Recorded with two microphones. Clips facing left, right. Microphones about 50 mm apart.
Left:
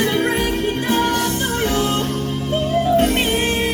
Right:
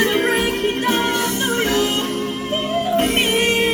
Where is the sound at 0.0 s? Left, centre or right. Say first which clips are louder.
Right 1 dB; right.